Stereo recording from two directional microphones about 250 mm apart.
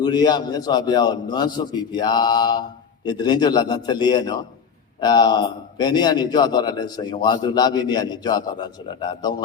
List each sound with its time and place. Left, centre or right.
0.0 s a man's voice: centre